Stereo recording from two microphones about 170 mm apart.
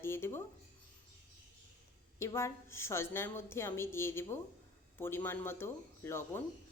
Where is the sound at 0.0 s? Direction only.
15° left (ahead or behind).